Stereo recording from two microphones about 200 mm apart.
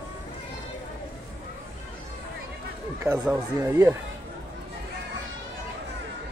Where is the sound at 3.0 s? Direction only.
10° right (ahead or behind).